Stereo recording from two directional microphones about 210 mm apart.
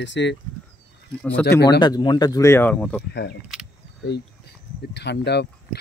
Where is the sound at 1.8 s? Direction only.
20° left (ahead or behind).